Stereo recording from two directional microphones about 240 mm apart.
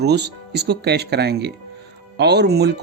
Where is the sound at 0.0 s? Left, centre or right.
Right.